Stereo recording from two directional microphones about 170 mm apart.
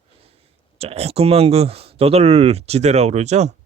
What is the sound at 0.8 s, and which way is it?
Speech, 35° right (ahead or behind).